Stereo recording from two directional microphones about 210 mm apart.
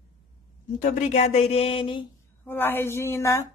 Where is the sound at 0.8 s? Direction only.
35° left (ahead or behind).